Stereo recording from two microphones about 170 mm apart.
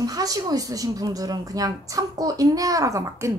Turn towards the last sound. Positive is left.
turn(degrees=-15)  # may be behind; listen again after turning